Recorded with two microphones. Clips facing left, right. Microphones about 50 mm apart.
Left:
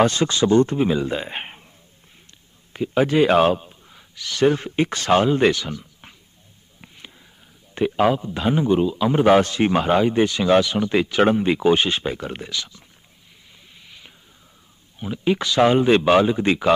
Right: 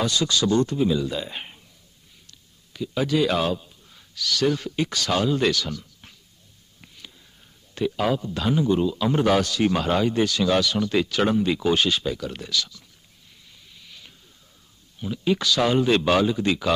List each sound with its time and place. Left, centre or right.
0.0 s speech: left
2.7 s speech: left
3.9 s speech: left
7.7 s speech: left
9.3 s speech: left
13.8 s a sound: centre
15.0 s speech: left